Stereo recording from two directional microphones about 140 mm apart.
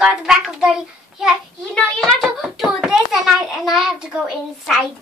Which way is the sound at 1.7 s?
5° left (ahead or behind).